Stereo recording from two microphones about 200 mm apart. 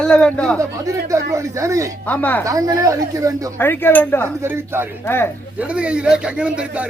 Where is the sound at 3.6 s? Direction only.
10° left (ahead or behind).